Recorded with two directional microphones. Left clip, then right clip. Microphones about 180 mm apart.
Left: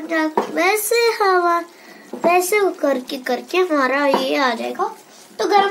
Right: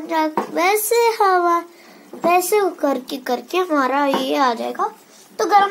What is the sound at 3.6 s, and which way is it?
A child's voice, 20° right (ahead or behind).